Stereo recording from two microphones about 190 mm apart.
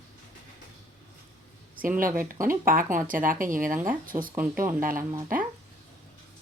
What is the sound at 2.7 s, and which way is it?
Speech, 45° right (ahead or behind).